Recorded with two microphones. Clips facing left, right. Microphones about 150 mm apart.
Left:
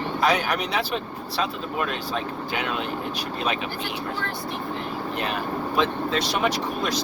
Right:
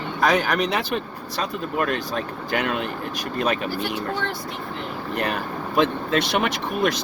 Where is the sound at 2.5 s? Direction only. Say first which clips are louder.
Right 7 dB; 45° right (ahead or behind).